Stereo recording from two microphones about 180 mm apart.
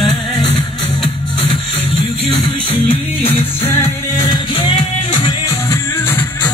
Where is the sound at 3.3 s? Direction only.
50° right (ahead or behind).